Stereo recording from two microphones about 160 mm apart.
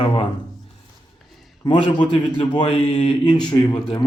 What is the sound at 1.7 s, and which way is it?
A man's voice, 30° left (ahead or behind).